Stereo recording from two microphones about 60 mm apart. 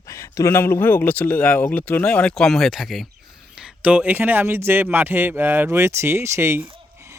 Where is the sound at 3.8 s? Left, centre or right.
Right.